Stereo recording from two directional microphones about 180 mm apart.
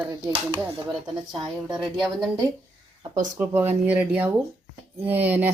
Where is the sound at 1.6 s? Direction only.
Centre (ahead or behind).